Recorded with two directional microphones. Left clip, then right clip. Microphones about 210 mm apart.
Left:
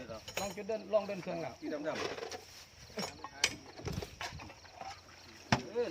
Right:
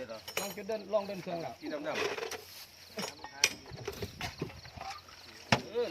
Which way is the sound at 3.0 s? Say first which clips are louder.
Right 3 dB; 20° right (ahead or behind).